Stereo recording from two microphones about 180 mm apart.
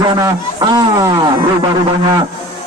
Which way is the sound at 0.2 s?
20° right (ahead or behind).